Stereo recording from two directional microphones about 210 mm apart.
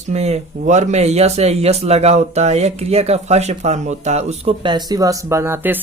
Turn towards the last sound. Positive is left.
turn(degrees=-10)  # may be behind; listen again after turning